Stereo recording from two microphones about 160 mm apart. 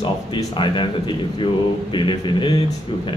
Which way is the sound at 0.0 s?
30° left (ahead or behind).